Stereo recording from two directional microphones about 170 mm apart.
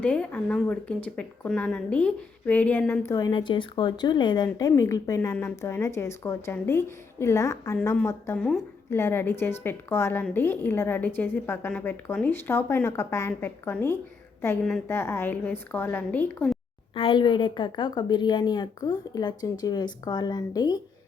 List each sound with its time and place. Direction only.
0.0 s a woman's voice: 10° left (ahead or behind)
3.2 s a woman's voice: 25° left (ahead or behind); by 16.6 s 5° left (ahead or behind)
16.9 s a woman's voice: 30° left (ahead or behind)